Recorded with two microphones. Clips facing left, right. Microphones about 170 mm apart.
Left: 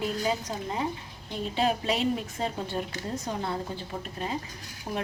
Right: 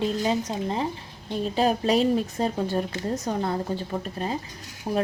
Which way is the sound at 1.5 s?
40° right (ahead or behind).